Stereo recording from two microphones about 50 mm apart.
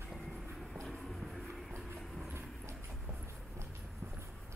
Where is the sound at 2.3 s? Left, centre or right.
Right.